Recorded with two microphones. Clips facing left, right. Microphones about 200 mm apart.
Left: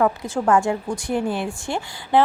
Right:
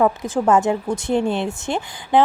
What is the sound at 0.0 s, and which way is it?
A woman's voice, 15° right (ahead or behind).